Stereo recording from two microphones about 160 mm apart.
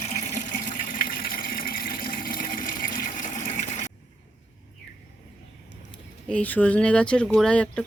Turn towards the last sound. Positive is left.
turn(degrees=5)  # may be behind; listen again after turning